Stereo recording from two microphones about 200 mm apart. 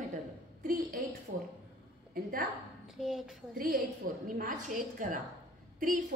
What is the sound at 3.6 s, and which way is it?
A woman's voice, 45° right (ahead or behind).